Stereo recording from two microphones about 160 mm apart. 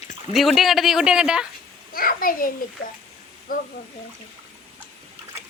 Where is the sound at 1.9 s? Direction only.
65° left (ahead or behind).